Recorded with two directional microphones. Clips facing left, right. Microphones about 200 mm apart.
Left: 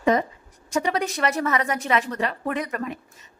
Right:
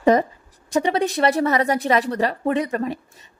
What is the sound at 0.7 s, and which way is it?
A woman's voice, 30° right (ahead or behind).